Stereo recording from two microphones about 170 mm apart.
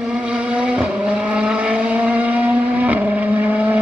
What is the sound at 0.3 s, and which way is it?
Vehicle, 5° right (ahead or behind).